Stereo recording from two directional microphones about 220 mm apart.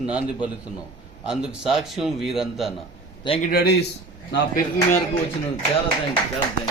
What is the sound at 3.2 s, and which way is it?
Speech, 25° left (ahead or behind).